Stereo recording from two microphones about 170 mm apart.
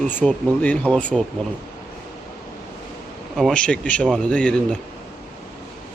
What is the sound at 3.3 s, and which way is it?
Speech, 5° left (ahead or behind).